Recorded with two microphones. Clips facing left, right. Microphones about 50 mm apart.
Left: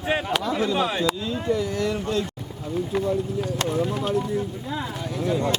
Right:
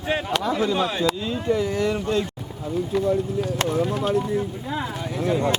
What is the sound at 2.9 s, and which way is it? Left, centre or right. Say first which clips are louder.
Speech: right 2 dB; left.